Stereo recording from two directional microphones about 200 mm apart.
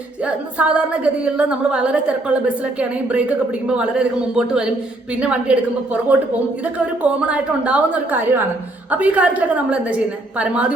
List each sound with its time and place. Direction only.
0.3 s a woman's voice: 5° right (ahead or behind)